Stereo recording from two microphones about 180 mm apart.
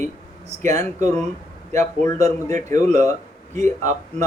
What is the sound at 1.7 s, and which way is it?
Speech, 15° left (ahead or behind).